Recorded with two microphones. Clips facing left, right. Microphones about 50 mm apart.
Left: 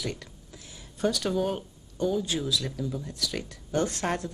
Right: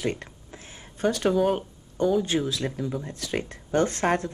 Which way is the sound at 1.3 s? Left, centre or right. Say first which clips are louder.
Right 5 dB; centre.